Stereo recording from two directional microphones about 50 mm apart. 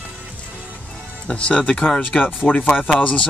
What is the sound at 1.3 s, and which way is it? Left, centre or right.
Speech, left.